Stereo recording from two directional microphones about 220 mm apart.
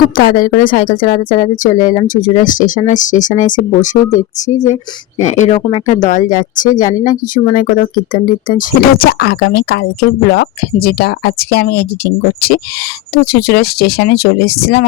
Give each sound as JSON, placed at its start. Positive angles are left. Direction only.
{"t": 0.2, "sound": "a woman's voice", "side_deg": 40}